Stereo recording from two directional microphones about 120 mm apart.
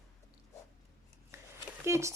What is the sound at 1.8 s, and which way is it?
Speech, 25° right (ahead or behind).